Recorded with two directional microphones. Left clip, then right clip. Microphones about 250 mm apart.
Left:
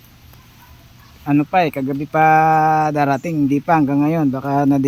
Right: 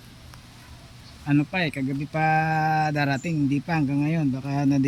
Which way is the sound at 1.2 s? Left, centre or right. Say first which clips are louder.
Left 9 dB; centre.